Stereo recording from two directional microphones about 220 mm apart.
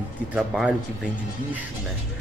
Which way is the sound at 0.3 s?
5° right (ahead or behind).